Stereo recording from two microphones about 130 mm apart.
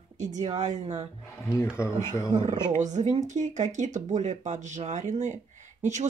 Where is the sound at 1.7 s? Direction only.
20° left (ahead or behind).